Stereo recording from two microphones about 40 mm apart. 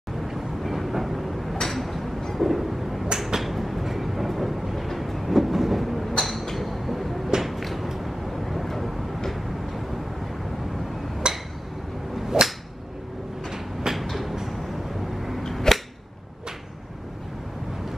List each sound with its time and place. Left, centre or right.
0.3 s vehicle: centre
1.6 s a sound: centre
11.3 s a sound: right
12.3 s whip: centre
13.5 s train: centre
15.4 s cap gun: centre